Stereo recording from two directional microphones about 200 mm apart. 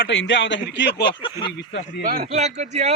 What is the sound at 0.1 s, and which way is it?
Speech, 70° left (ahead or behind).